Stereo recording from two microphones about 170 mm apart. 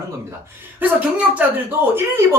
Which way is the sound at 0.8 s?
10° right (ahead or behind).